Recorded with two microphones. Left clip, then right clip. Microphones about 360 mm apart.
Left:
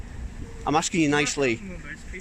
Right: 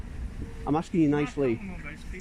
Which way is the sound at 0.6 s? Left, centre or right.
Left.